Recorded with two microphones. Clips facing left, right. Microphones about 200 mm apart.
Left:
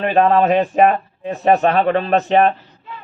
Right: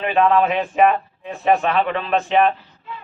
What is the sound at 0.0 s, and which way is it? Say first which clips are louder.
Speech: left 3 dB; 40° left (ahead or behind).